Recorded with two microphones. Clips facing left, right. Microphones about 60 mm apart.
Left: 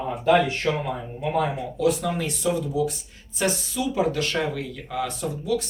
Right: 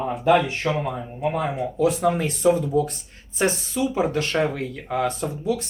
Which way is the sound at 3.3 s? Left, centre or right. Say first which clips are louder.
Right 3 dB; right.